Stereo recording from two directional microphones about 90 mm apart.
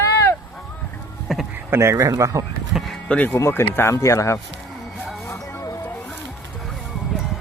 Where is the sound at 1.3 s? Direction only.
Centre (ahead or behind).